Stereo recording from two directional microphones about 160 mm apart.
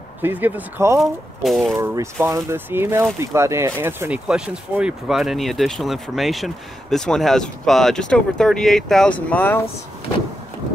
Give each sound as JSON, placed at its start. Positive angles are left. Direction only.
{"t": 0.2, "sound": "speech", "side_deg": -10}
{"t": 0.9, "sound": "speech", "side_deg": 0}
{"t": 2.2, "sound": "speech", "side_deg": -15}